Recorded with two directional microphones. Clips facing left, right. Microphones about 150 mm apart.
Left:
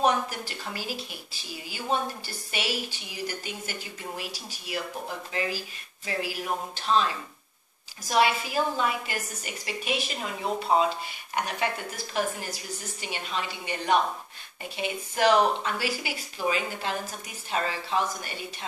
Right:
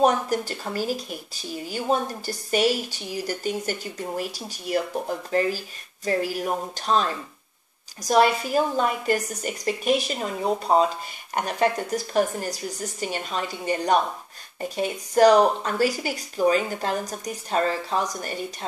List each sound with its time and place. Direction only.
0.0 s speech: 45° right (ahead or behind)